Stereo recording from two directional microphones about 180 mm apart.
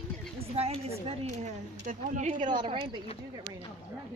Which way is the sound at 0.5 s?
35° right (ahead or behind).